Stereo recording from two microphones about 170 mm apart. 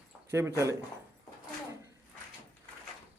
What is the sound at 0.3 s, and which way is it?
Speech, 15° right (ahead or behind).